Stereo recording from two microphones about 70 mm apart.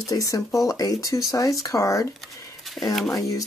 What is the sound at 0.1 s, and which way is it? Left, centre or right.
Speech, left.